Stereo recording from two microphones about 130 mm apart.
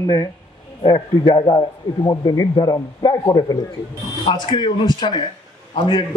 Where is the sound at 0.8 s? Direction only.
30° left (ahead or behind).